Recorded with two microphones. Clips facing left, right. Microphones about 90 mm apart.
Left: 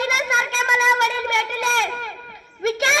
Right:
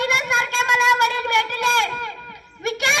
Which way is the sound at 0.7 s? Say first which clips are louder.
Right 1 dB; centre (ahead or behind).